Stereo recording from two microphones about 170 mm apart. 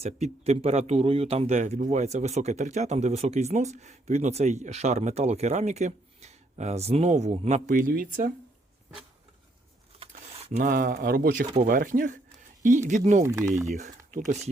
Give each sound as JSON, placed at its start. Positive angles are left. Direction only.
{"t": 0.0, "sound": "speech", "side_deg": -40}
{"t": 10.3, "sound": "a sound", "side_deg": -35}
{"t": 10.6, "sound": "speech", "side_deg": -55}
{"t": 13.2, "sound": "speech", "side_deg": -20}
{"t": 13.7, "sound": "speech", "side_deg": -45}